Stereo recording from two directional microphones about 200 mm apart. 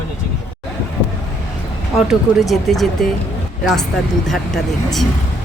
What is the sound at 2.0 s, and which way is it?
Speech, centre (ahead or behind).